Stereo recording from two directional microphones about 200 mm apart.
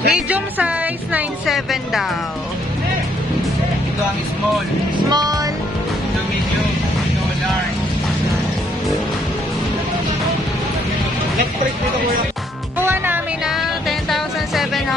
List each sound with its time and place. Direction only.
0.1 s speech: 5° right (ahead or behind)
5.1 s music: 20° right (ahead or behind)
12.8 s music: 10° right (ahead or behind)